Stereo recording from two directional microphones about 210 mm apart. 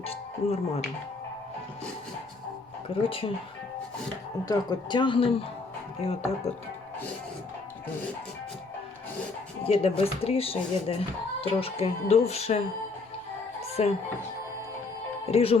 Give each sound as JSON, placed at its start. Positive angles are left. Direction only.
{"t": 0.0, "sound": "speech", "side_deg": 30}
{"t": 2.9, "sound": "speech", "side_deg": 25}
{"t": 4.4, "sound": "speech", "side_deg": 20}
{"t": 9.6, "sound": "speech", "side_deg": 25}
{"t": 13.6, "sound": "music", "side_deg": 30}
{"t": 15.3, "sound": "speech", "side_deg": 30}